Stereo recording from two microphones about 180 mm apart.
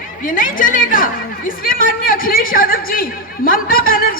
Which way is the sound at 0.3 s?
50° left (ahead or behind).